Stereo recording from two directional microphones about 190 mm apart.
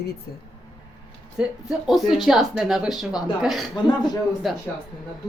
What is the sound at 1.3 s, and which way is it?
Speech, centre (ahead or behind).